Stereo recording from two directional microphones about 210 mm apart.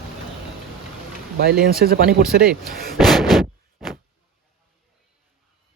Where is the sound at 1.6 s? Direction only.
45° right (ahead or behind).